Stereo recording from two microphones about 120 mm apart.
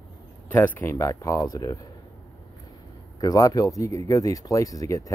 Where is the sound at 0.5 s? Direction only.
20° left (ahead or behind).